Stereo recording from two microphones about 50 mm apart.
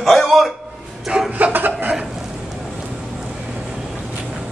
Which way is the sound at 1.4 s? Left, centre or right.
Right.